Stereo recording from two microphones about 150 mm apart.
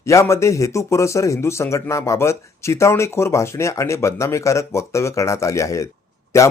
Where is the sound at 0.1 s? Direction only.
20° left (ahead or behind).